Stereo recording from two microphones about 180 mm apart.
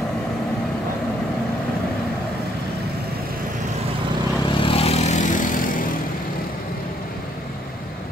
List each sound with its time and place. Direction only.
4.5 s vehicle: 30° left (ahead or behind); by 5.9 s 50° left (ahead or behind)